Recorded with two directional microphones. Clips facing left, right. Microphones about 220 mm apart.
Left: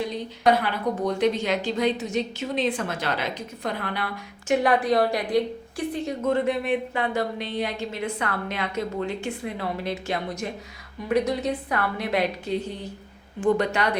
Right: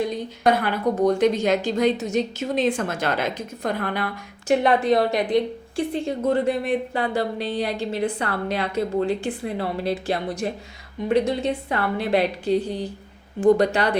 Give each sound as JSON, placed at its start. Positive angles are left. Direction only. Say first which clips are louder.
{"t": 0.4, "sound": "a woman's voice", "louder": "right 2 dB", "side_deg": -45}
{"t": 4.4, "sound": "a woman's voice", "louder": "right 3 dB", "side_deg": -25}